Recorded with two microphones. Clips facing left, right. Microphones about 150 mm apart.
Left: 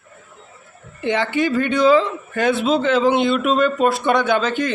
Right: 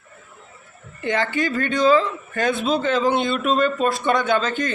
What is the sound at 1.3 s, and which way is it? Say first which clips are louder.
Speech: left 4 dB; 15° left (ahead or behind).